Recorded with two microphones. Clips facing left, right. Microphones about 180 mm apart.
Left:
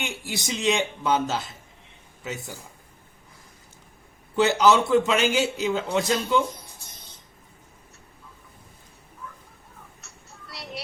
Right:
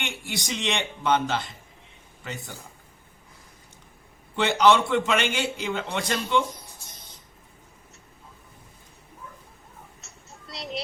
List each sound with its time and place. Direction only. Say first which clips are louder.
0.0 s a man's voice: left 2 dB; 5° left (ahead or behind)
4.4 s a man's voice: left 1 dB; 5° left (ahead or behind)
10.0 s a sound: even; 20° right (ahead or behind)